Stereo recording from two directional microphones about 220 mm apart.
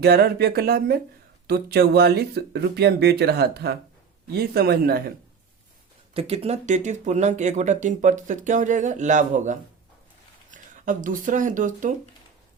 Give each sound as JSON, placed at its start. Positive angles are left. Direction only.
{"t": 0.0, "sound": "speech", "side_deg": -45}
{"t": 6.1, "sound": "speech", "side_deg": -25}